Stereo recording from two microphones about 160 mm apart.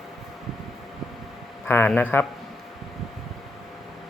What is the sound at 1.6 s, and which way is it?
Speech, 10° left (ahead or behind).